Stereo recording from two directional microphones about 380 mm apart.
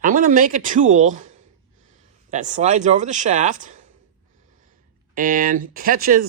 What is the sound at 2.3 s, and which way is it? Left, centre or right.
Speech, centre.